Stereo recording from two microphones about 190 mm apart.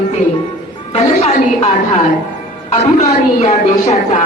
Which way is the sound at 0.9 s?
35° left (ahead or behind).